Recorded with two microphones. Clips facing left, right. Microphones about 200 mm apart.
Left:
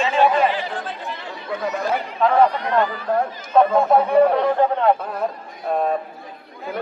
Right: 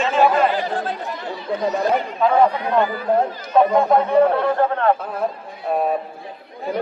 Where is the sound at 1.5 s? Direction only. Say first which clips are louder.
Right 4 dB; 30° right (ahead or behind).